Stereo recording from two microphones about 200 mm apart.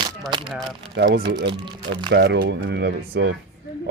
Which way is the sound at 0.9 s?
60° right (ahead or behind).